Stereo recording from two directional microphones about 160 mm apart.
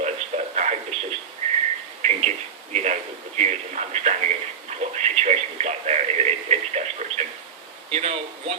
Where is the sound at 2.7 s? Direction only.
45° right (ahead or behind).